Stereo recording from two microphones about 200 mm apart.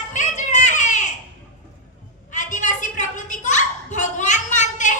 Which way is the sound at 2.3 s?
40° left (ahead or behind).